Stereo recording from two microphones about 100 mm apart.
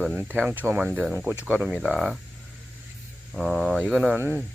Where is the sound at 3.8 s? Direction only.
10° right (ahead or behind).